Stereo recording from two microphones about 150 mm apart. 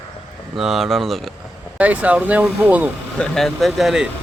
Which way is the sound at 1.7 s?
10° right (ahead or behind).